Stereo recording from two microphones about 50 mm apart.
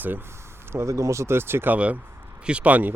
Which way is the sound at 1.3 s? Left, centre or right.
Right.